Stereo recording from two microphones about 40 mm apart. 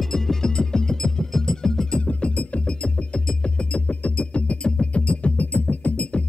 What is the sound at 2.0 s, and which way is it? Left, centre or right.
Music, left.